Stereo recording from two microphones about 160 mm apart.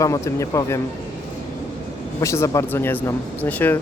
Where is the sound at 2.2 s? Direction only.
20° left (ahead or behind).